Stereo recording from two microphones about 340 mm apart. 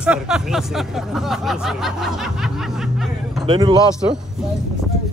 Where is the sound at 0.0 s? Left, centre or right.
Centre.